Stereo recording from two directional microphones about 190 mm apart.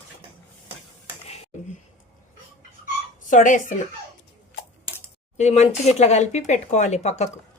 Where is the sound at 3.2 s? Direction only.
40° left (ahead or behind).